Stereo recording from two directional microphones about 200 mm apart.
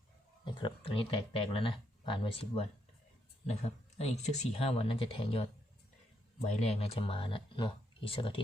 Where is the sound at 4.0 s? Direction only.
30° left (ahead or behind).